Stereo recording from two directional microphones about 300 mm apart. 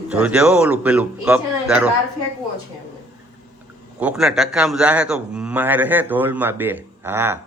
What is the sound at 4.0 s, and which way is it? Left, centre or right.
A man's voice, centre.